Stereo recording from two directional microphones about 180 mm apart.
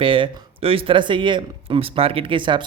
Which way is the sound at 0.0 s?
30° right (ahead or behind).